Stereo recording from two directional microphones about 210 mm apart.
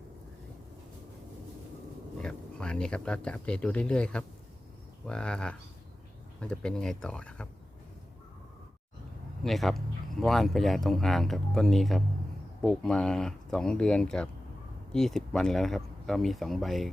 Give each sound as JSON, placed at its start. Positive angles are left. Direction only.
{"t": 2.2, "sound": "speech", "side_deg": 5}
{"t": 9.4, "sound": "speech", "side_deg": 0}